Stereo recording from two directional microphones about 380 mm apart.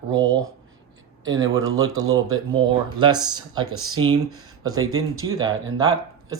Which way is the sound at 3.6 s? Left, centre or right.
Right.